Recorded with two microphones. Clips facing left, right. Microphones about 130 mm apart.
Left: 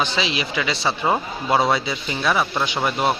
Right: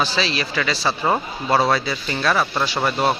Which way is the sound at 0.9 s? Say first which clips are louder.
Even; 5° left (ahead or behind).